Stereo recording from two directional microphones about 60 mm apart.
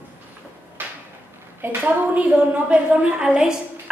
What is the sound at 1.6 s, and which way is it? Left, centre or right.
A woman's voice, right.